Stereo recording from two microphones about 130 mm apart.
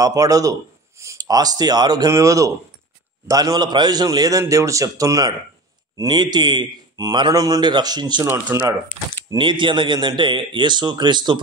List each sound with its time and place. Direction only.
0.0 s a man's voice: 25° right (ahead or behind)
8.3 s speech: 20° right (ahead or behind)
9.3 s a man's voice: 40° right (ahead or behind)